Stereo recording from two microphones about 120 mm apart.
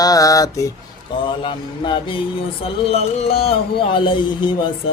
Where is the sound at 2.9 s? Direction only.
60° left (ahead or behind); by 4.5 s 40° left (ahead or behind).